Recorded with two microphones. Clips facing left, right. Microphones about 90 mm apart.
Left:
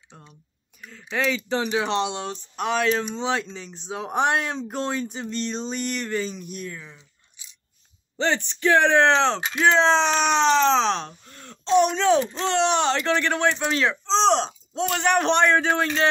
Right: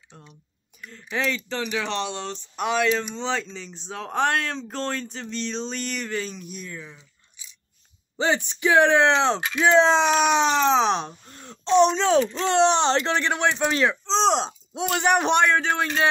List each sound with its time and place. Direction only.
1.1 s speech: centre (ahead or behind)
1.6 s speech: 25° left (ahead or behind)
2.3 s speech: centre (ahead or behind)
4.0 s speech: 15° left (ahead or behind); by 7.0 s centre (ahead or behind)
8.2 s speech: 10° right (ahead or behind); by 12.1 s 25° right (ahead or behind)
12.2 s speech: 35° left (ahead or behind)
12.5 s speech: 30° right (ahead or behind); by 13.9 s 15° right (ahead or behind)
14.0 s speech: centre (ahead or behind)
14.3 s speech: 15° right (ahead or behind)